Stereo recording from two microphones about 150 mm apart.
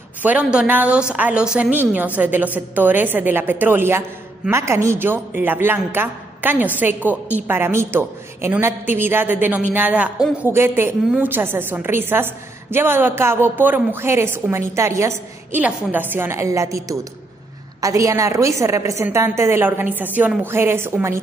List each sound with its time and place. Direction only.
0.2 s a woman's voice: 10° right (ahead or behind)